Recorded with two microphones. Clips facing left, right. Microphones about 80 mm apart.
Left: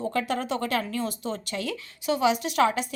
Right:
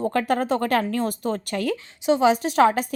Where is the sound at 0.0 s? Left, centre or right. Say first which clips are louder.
Right 5 dB; right.